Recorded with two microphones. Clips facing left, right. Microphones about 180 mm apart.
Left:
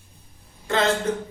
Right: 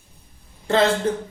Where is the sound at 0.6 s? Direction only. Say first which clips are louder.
Right 5 dB; 30° right (ahead or behind).